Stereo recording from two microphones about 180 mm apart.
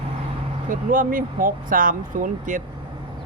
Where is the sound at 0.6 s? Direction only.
50° right (ahead or behind).